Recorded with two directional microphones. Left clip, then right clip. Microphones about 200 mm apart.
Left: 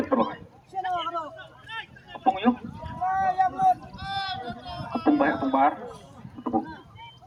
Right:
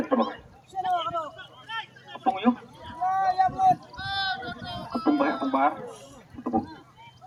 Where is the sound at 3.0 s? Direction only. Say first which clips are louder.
Even; 15° right (ahead or behind).